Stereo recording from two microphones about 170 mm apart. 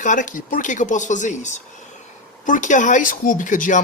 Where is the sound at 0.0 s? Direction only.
50° left (ahead or behind).